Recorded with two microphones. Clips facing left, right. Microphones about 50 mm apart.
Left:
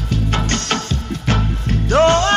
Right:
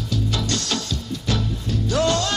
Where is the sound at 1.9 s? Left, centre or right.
Left.